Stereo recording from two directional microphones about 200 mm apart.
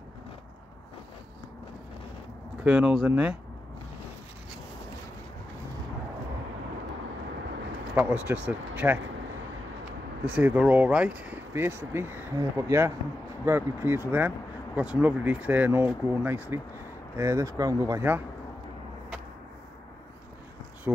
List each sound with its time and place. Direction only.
2.6 s speech: 5° right (ahead or behind)
7.9 s speech: 10° right (ahead or behind)
10.3 s speech: 5° right (ahead or behind)